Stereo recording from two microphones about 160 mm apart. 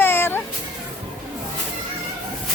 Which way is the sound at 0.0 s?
15° left (ahead or behind).